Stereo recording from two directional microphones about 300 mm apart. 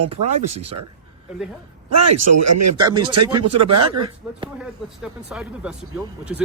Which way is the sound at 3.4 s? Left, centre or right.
Right.